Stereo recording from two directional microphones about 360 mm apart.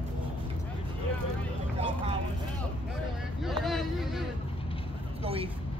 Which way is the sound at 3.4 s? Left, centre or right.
Centre.